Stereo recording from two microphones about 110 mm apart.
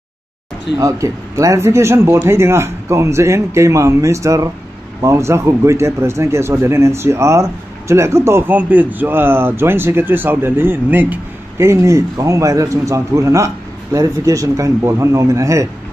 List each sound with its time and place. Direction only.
0.7 s speech: 30° right (ahead or behind)